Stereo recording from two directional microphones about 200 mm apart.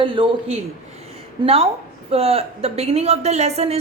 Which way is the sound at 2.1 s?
30° right (ahead or behind).